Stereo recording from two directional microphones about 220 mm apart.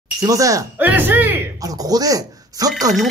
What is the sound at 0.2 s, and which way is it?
Speech, 15° right (ahead or behind).